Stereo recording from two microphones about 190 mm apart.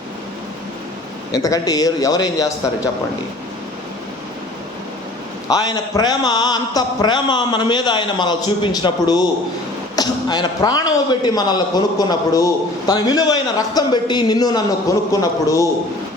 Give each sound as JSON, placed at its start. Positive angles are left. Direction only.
{"t": 1.3, "sound": "a man's voice", "side_deg": 20}
{"t": 5.5, "sound": "a man's voice", "side_deg": 20}